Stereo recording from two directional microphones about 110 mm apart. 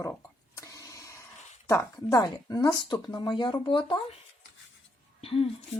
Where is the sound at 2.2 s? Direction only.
35° left (ahead or behind).